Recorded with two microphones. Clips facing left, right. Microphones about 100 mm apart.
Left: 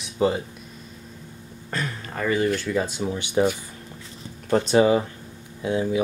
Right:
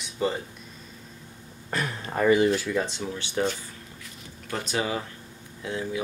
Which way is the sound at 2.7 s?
5° left (ahead or behind).